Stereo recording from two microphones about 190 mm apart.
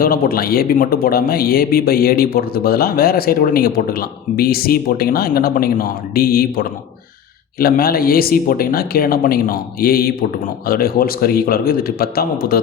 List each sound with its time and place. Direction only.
0.0 s speech: 50° left (ahead or behind)